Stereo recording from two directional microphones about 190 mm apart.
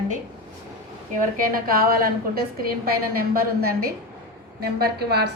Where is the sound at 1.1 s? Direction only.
45° right (ahead or behind).